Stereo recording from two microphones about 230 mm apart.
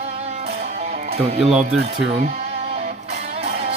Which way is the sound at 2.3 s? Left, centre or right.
Right.